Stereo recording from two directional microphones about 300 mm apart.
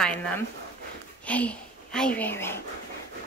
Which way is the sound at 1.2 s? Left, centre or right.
Centre.